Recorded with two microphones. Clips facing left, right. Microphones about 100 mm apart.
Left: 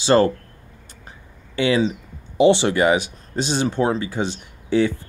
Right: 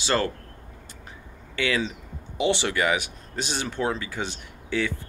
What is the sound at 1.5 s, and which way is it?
Speech, 25° left (ahead or behind).